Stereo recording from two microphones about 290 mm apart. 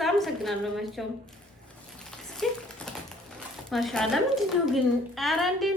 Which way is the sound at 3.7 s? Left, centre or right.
Centre.